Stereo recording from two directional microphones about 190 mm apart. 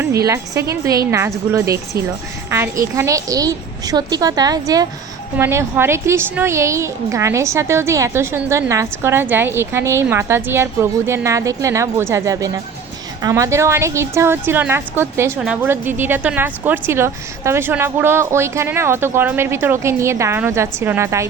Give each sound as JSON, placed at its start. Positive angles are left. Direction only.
{"t": 0.0, "sound": "a woman's voice", "side_deg": -15}